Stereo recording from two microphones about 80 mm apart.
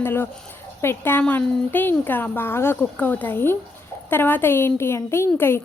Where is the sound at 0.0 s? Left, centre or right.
Left.